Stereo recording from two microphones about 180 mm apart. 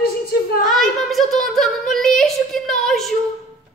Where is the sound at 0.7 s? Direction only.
Centre (ahead or behind).